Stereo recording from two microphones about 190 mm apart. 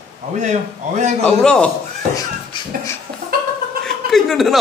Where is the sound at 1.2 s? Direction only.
5° left (ahead or behind).